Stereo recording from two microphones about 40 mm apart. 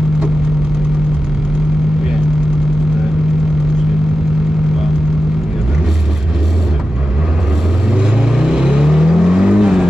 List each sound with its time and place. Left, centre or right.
8.4 s vehicle: centre